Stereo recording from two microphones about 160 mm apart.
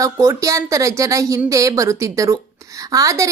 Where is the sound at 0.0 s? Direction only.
20° right (ahead or behind).